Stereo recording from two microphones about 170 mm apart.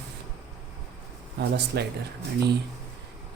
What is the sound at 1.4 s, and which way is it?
Speech, 75° right (ahead or behind).